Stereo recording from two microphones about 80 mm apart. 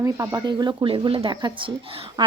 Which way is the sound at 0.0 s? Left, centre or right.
Right.